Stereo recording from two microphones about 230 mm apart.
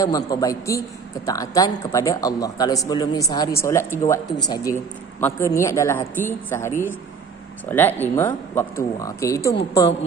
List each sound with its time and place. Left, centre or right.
0.0 s a man's voice: centre